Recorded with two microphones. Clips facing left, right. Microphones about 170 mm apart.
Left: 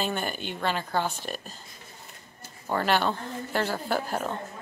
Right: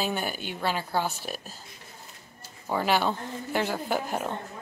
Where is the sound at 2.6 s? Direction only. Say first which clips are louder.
Even; 10° right (ahead or behind).